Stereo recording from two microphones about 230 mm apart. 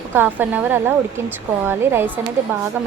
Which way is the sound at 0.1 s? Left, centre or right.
Centre.